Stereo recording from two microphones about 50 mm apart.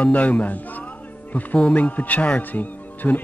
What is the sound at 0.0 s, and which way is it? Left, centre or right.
Speech, left.